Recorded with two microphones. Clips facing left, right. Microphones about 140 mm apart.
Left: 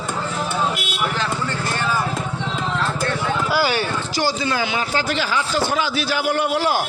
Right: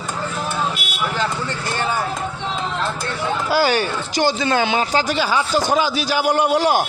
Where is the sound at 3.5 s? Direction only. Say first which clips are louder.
Right 4 dB; 40° right (ahead or behind).